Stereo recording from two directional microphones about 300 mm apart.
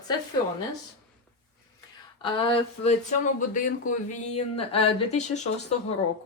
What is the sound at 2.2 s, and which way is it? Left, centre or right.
Speech, centre.